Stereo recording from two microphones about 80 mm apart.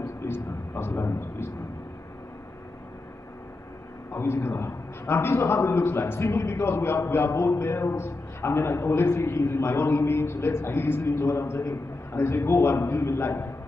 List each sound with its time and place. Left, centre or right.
0.3 s speech: left
4.1 s a man's voice: left